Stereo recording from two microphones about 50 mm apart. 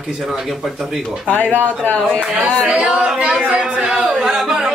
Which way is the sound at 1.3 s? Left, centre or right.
Left.